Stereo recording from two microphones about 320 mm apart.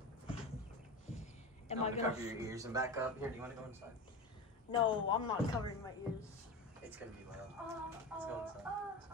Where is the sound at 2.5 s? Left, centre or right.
Centre.